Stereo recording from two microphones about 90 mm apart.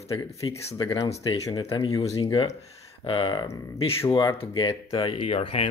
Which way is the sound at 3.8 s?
90° left.